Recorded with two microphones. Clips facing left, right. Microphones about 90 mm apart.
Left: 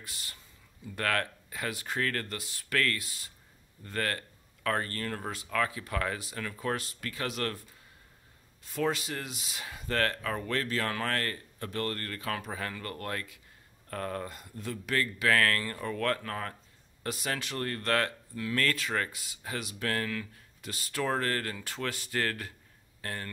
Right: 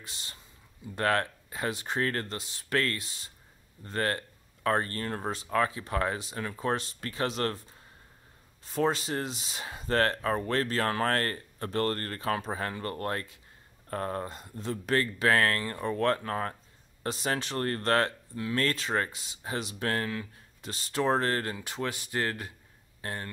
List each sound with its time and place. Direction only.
0.0 s speech: 25° right (ahead or behind)